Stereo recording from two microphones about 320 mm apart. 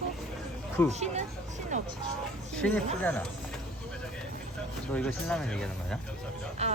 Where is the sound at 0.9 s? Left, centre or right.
Right.